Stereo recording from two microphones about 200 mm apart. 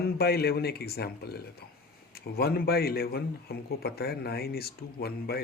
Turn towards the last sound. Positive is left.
turn(degrees=50)  # may be behind; listen again after turning